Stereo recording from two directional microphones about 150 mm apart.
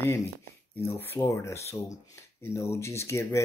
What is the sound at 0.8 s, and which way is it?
Speech, 15° left (ahead or behind).